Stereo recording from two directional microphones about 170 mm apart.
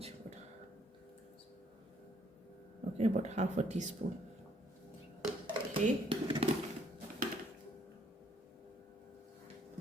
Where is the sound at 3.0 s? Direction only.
40° right (ahead or behind).